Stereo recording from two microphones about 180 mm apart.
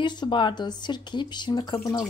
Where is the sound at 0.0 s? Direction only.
25° left (ahead or behind).